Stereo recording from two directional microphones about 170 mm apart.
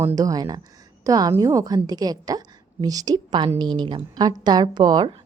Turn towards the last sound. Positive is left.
turn(degrees=-25)  # may be behind; listen again after turning